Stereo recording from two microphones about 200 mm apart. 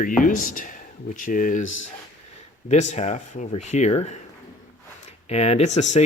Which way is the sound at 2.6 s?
35° left (ahead or behind).